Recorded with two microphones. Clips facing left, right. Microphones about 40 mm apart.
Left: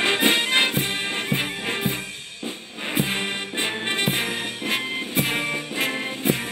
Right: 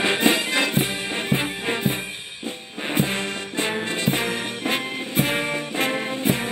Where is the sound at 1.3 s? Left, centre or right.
Right.